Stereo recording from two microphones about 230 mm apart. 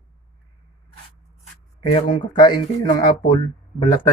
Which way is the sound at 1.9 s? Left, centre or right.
Centre.